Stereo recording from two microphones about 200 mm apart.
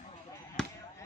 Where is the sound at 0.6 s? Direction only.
5° left (ahead or behind).